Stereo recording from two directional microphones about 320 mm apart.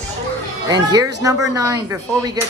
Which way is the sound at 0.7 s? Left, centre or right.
Centre.